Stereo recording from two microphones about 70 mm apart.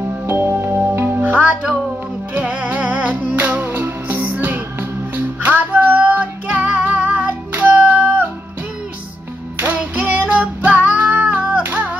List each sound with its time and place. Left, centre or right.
0.3 s music: right
9.6 s music: right